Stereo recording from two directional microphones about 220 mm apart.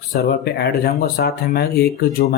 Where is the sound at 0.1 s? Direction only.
45° left (ahead or behind).